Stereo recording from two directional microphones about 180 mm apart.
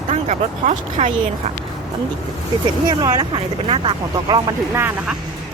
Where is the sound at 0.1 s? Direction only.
40° right (ahead or behind).